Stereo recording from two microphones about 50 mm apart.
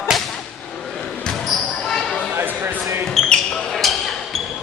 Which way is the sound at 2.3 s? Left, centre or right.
Right.